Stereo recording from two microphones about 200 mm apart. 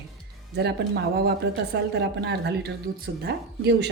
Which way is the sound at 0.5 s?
55° right (ahead or behind).